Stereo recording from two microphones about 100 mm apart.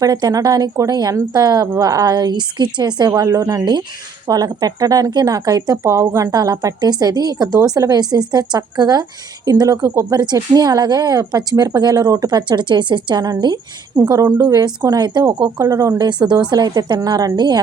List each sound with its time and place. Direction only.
0.0 s a woman's voice: 40° right (ahead or behind)
3.2 s a woman's voice: 30° right (ahead or behind)
14.1 s a woman's voice: 35° right (ahead or behind)
14.4 s a woman's voice: 45° right (ahead or behind)
16.0 s a woman's voice: 50° right (ahead or behind)